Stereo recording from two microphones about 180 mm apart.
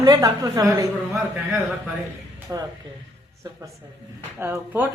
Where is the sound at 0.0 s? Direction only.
20° right (ahead or behind).